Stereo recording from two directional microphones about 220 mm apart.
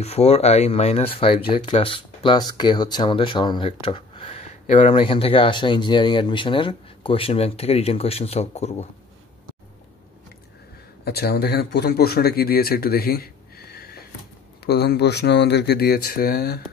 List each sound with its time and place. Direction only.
0.0 s speech: 30° left (ahead or behind)
11.1 s speech: 45° left (ahead or behind)